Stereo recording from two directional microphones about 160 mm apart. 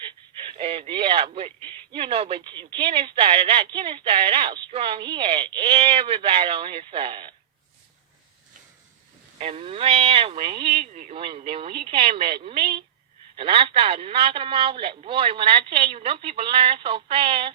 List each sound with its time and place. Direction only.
0.0 s speech: 30° right (ahead or behind)
9.4 s speech: 35° right (ahead or behind)